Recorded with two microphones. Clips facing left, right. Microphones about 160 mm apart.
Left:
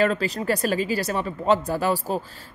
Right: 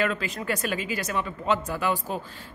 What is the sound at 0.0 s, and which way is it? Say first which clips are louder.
Speech: left 5 dB; 35° left (ahead or behind).